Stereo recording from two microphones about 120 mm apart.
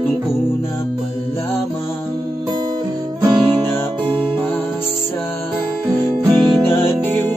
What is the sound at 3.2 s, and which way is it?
Music, 40° right (ahead or behind).